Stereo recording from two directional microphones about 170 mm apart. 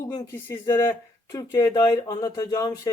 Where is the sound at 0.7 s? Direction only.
15° left (ahead or behind).